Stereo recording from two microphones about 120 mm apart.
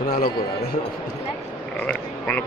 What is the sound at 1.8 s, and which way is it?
Speech, 10° left (ahead or behind).